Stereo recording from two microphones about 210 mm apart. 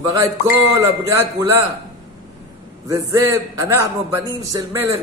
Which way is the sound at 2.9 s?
15° right (ahead or behind).